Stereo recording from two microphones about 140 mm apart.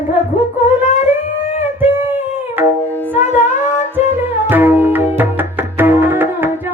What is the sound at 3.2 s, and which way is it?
Music, 55° left (ahead or behind).